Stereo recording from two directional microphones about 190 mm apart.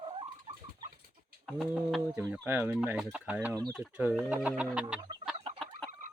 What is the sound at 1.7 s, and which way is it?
Speech, 10° right (ahead or behind).